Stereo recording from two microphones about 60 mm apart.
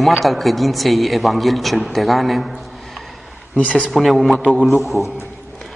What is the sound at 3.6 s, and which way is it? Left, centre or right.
Speech, centre.